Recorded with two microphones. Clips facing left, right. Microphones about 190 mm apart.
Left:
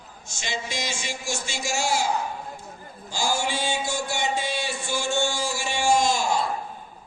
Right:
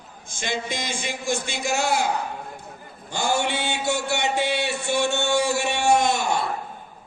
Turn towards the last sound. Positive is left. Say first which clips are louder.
# right 1 dB
turn(degrees=-65)  # may be behind; listen again after turning